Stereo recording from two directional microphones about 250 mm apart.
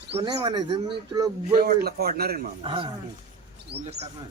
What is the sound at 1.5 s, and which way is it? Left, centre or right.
Speech, right.